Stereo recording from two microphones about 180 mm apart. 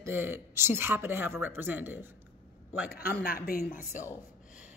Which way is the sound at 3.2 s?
55° left (ahead or behind).